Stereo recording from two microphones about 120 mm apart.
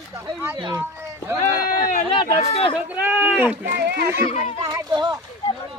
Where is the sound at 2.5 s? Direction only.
50° left (ahead or behind).